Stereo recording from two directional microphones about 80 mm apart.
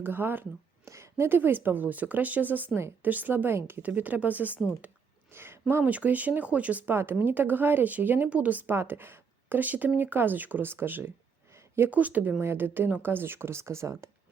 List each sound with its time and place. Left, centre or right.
0.0 s speech: right
0.9 s speech: right